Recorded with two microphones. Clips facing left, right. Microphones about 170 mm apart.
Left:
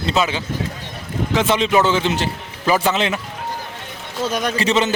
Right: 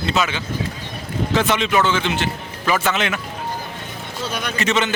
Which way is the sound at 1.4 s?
30° left (ahead or behind).